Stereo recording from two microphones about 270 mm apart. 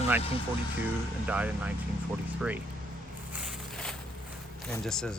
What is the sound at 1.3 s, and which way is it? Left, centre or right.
Speech, centre.